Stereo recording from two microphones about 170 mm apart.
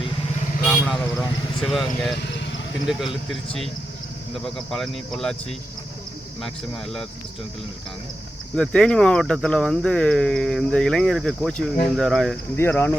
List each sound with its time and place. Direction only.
0.6 s vehicle: centre (ahead or behind)
1.6 s speech: centre (ahead or behind)
2.2 s vehicle: 90° left
2.8 s speech: centre (ahead or behind)
8.5 s speech: 5° left (ahead or behind)
12.5 s speech: 15° left (ahead or behind)